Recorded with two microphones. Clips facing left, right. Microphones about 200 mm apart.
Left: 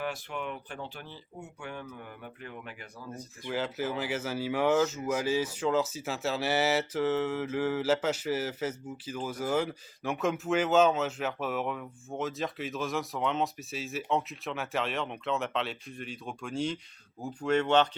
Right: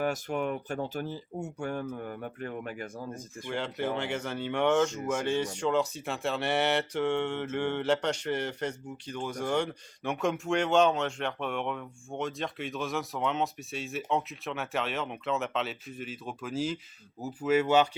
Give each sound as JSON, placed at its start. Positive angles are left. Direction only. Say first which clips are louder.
{"t": 0.0, "sound": "speech", "louder": "right 6 dB", "side_deg": -45}
{"t": 3.4, "sound": "speech", "louder": "even", "side_deg": 5}